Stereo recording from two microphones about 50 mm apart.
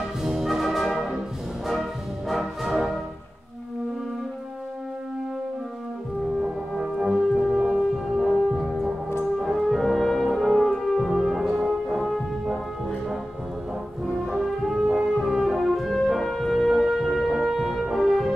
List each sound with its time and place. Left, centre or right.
0.2 s brass instrument: centre
6.8 s brass instrument: centre
8.2 s music: centre
9.4 s french horn: centre
14.2 s brass instrument: centre
16.7 s brass instrument: centre